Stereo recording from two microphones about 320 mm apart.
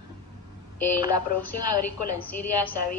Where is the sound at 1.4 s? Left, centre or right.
Left.